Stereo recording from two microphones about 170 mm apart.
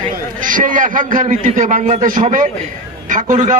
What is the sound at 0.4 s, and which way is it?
A man's voice, 50° right (ahead or behind).